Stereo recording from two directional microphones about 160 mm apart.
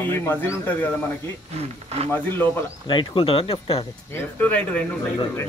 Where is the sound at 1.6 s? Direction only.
40° right (ahead or behind).